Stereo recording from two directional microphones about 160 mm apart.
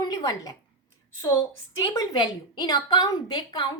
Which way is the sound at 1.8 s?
25° left (ahead or behind).